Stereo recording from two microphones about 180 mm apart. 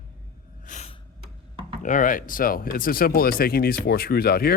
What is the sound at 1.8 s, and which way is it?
Speech, 45° left (ahead or behind).